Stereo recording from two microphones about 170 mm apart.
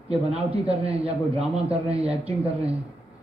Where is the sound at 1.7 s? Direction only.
35° right (ahead or behind).